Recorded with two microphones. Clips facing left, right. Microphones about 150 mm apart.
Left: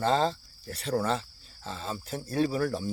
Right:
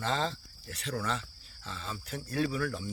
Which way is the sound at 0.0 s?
35° left (ahead or behind).